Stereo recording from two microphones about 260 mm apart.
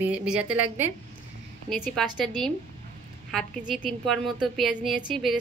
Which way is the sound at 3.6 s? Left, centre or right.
Left.